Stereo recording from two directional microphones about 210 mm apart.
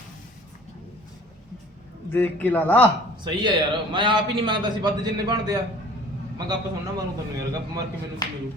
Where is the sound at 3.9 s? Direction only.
20° right (ahead or behind).